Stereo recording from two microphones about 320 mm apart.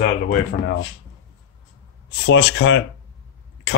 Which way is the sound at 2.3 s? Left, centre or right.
Left.